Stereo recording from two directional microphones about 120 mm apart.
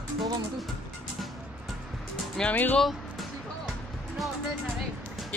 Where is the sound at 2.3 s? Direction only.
10° left (ahead or behind).